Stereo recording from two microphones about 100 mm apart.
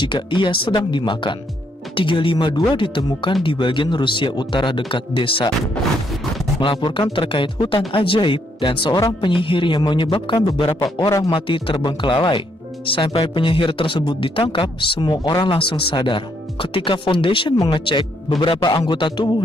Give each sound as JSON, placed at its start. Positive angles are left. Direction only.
{"t": 0.0, "sound": "speech", "side_deg": 55}
{"t": 6.6, "sound": "speech", "side_deg": 55}
{"t": 11.2, "sound": "speech", "side_deg": 60}